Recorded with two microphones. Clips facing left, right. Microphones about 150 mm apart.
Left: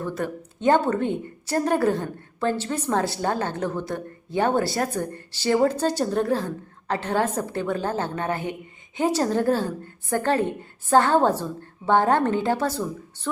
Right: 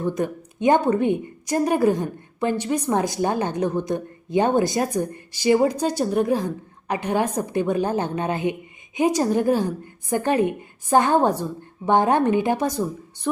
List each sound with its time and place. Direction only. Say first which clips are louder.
0.0 s a woman's voice: right 4 dB; 15° right (ahead or behind)